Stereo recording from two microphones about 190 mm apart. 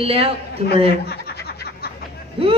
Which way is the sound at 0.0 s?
30° right (ahead or behind).